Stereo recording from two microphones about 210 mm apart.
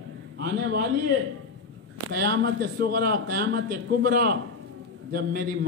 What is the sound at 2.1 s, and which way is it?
A man's voice, 50° right (ahead or behind).